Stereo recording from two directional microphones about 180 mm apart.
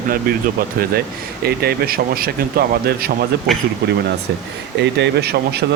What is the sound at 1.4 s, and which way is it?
Speech, 60° right (ahead or behind).